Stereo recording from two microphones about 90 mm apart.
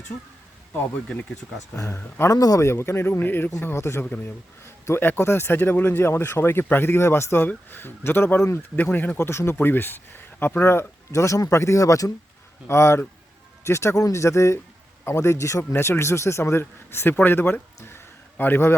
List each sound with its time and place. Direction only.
1.7 s speech: 30° left (ahead or behind)
2.3 s speech: 40° left (ahead or behind)
2.6 s speech: 30° left (ahead or behind)
4.0 s speech: 15° left (ahead or behind)
9.1 s speech: 30° left (ahead or behind)
17.7 s a sound: 25° left (ahead or behind)